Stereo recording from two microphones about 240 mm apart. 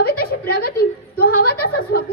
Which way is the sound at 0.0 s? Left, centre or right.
Left.